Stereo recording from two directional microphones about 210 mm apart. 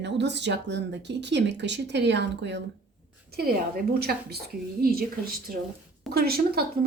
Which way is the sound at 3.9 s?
50° right (ahead or behind).